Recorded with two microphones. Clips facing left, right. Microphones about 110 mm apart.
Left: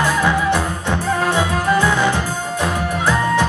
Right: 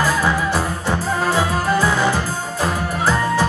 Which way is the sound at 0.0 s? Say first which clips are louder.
Left 1 dB; 5° right (ahead or behind).